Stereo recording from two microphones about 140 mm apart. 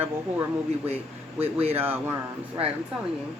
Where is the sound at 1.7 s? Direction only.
15° right (ahead or behind).